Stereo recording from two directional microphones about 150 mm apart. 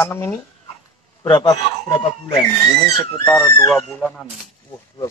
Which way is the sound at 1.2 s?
30° left (ahead or behind).